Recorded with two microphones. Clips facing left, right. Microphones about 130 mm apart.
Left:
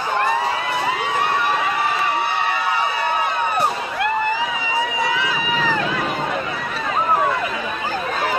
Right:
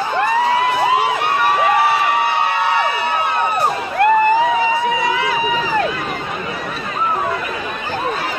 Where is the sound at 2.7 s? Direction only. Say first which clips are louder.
Right 3 dB; 70° right (ahead or behind).